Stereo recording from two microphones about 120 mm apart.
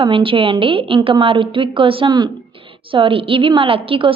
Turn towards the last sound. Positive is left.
turn(degrees=-50)  # may be behind; listen again after turning